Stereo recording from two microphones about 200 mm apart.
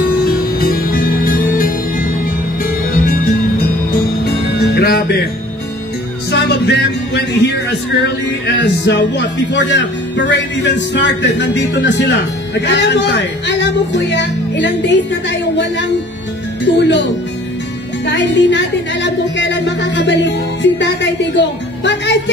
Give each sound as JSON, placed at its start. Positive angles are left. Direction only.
{"t": 0.2, "sound": "music", "side_deg": 50}
{"t": 6.3, "sound": "music", "side_deg": 55}
{"t": 8.5, "sound": "a woman's voice", "side_deg": 60}
{"t": 18.0, "sound": "a woman's voice", "side_deg": 60}